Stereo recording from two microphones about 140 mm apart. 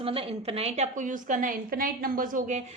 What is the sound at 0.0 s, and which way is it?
A woman's voice, 40° right (ahead or behind).